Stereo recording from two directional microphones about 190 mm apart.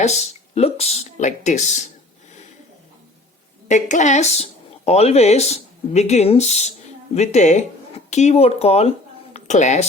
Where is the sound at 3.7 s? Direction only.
40° left (ahead or behind).